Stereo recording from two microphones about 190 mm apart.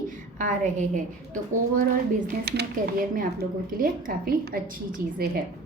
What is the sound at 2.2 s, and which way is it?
Speech, 60° right (ahead or behind).